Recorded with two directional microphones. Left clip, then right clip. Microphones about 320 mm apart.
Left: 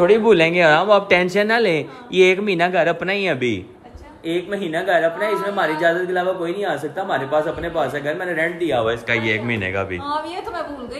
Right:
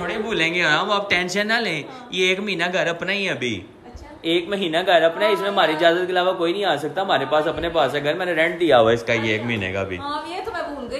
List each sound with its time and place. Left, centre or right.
0.0 s speech: centre
4.6 s speech: centre
8.6 s a man's voice: right
9.0 s speech: centre